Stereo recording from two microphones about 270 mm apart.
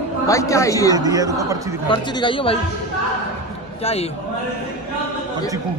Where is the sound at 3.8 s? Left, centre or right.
Left.